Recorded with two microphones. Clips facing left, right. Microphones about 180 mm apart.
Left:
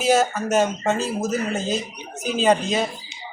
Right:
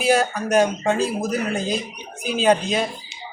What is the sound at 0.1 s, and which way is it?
Speech, 5° left (ahead or behind).